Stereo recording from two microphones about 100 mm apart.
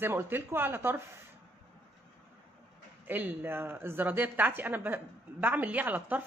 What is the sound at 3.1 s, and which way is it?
Speech, 20° right (ahead or behind).